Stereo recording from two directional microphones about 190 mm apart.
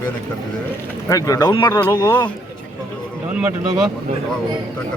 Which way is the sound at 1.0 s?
20° left (ahead or behind).